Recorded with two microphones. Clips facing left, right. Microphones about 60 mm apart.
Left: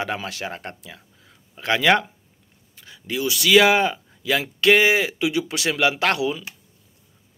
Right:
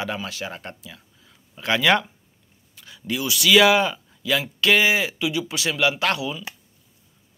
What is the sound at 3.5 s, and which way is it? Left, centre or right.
Speech, left.